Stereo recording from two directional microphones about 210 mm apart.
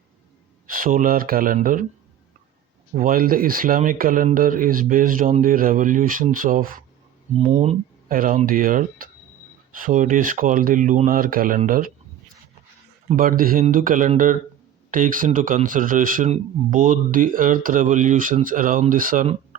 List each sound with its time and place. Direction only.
0.7 s speech: 40° right (ahead or behind)
2.9 s speech: 40° right (ahead or behind)
13.1 s speech: 40° right (ahead or behind)